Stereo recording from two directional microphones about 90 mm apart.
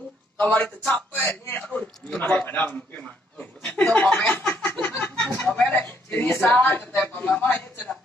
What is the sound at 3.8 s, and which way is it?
Chuckle, 10° left (ahead or behind).